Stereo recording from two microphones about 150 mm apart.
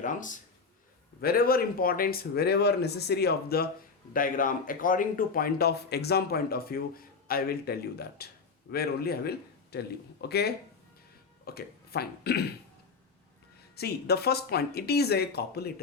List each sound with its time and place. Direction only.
0.0 s a man's voice: 60° left (ahead or behind)
1.2 s speech: 85° left
4.1 s speech: 65° left (ahead or behind); by 12.5 s 90° left
13.7 s speech: 90° left